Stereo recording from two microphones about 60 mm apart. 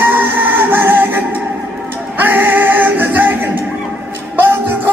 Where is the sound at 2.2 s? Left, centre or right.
Right.